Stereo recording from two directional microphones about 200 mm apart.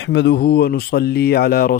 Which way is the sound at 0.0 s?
65° left (ahead or behind).